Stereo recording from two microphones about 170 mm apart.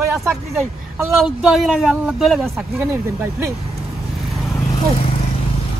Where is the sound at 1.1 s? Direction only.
Centre (ahead or behind).